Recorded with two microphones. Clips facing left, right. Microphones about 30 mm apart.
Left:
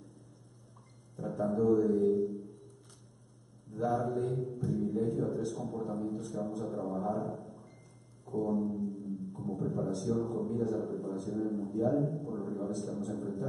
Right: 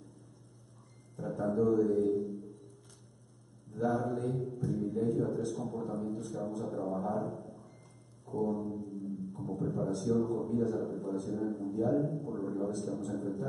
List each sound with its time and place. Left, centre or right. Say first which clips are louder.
1.1 s a man's voice: even; centre
3.7 s a man's voice: even; centre
8.3 s brass instrument: left 1 dB; centre
8.7 s music: left 2 dB; centre
9.8 s a man's voice: right 3 dB; centre